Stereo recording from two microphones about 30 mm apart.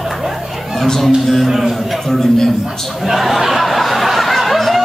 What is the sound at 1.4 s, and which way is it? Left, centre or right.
Speech, centre.